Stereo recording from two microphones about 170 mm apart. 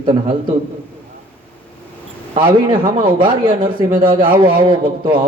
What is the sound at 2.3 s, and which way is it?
A man's voice, 30° right (ahead or behind).